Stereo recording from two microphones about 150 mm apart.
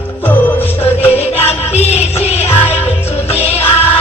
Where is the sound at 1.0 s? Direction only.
45° left (ahead or behind).